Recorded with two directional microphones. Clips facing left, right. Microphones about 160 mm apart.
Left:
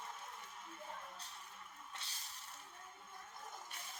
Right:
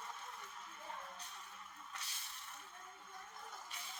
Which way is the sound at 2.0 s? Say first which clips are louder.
Right 1 dB; 25° left (ahead or behind).